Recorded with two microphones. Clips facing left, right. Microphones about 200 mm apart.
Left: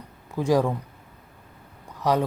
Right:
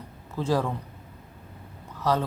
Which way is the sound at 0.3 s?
15° left (ahead or behind).